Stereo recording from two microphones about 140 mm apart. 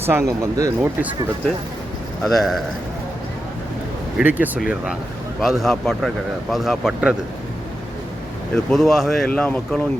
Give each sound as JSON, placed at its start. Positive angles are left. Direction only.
{"t": 0.0, "sound": "speech", "side_deg": -20}
{"t": 2.2, "sound": "speech", "side_deg": 0}
{"t": 4.2, "sound": "speech", "side_deg": -10}
{"t": 8.5, "sound": "speech", "side_deg": 0}